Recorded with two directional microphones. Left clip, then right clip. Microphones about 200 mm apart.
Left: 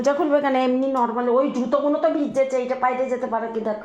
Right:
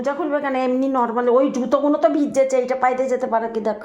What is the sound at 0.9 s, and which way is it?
Speech, 25° right (ahead or behind).